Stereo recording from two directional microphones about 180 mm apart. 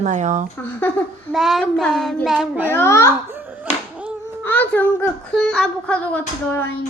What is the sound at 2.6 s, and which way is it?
Speech, 15° left (ahead or behind).